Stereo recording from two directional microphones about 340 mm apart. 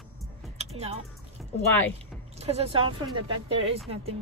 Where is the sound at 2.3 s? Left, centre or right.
Centre.